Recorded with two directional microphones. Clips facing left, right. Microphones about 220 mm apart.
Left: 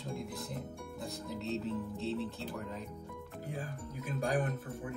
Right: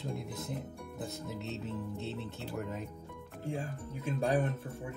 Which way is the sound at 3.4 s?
25° right (ahead or behind).